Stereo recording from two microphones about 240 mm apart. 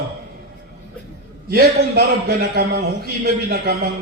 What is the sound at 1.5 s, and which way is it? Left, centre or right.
A man's voice, right.